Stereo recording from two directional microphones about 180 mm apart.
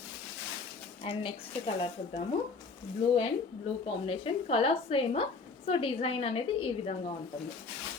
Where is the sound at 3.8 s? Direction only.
30° left (ahead or behind).